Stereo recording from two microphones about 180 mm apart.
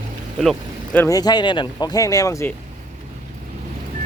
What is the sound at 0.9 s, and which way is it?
Speech, 20° left (ahead or behind).